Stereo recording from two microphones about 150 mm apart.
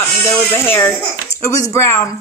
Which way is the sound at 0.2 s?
15° left (ahead or behind).